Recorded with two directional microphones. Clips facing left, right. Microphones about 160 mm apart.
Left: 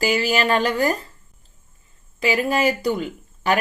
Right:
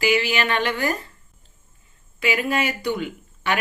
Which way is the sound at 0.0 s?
40° left (ahead or behind).